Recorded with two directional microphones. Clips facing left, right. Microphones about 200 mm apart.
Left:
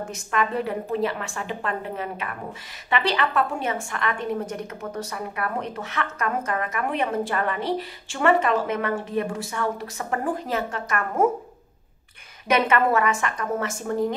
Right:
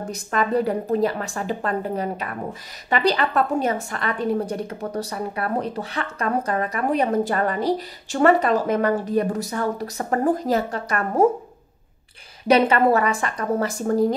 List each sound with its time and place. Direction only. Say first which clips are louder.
0.0 s a woman's voice: right 2 dB; 35° right (ahead or behind)
12.4 s a woman's voice: right 4 dB; 35° right (ahead or behind)